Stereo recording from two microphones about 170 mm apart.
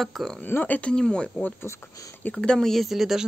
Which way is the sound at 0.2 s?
Centre (ahead or behind).